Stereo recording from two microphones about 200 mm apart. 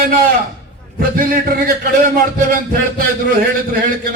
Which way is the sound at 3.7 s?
45° right (ahead or behind).